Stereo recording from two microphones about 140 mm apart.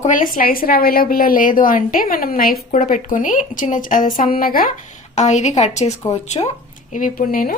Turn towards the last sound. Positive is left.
turn(degrees=90)